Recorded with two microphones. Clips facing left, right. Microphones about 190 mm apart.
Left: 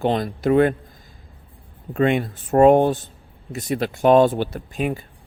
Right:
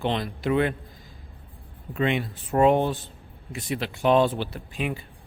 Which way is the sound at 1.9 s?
45° left (ahead or behind).